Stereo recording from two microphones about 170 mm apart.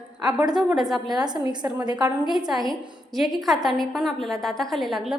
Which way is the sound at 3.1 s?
Centre (ahead or behind).